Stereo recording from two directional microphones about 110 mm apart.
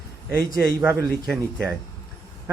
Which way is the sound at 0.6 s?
25° right (ahead or behind).